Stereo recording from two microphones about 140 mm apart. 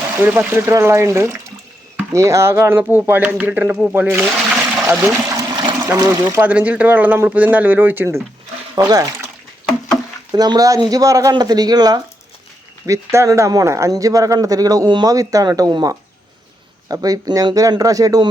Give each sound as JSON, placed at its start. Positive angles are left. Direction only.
{"t": 0.2, "sound": "speech", "side_deg": -15}
{"t": 4.3, "sound": "water", "side_deg": -5}
{"t": 5.0, "sound": "water", "side_deg": -20}
{"t": 5.8, "sound": "speech", "side_deg": -20}
{"t": 8.7, "sound": "speech", "side_deg": -25}
{"t": 10.3, "sound": "speech", "side_deg": -30}